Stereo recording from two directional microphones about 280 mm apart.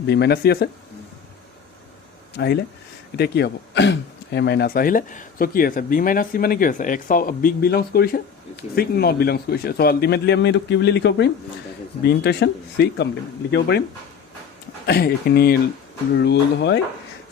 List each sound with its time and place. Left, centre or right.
0.1 s speech: left
2.4 s speech: left
14.8 s speech: left